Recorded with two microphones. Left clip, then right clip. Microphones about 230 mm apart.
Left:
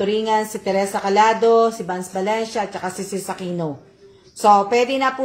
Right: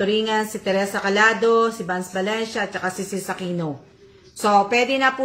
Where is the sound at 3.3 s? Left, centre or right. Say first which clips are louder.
Even; centre.